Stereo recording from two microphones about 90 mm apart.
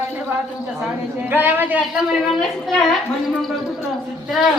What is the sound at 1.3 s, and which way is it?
Speech, 25° right (ahead or behind).